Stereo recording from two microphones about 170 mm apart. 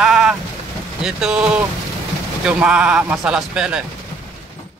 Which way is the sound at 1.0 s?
5° right (ahead or behind).